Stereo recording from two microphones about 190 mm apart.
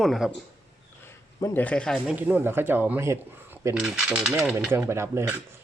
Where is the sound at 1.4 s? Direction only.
10° left (ahead or behind).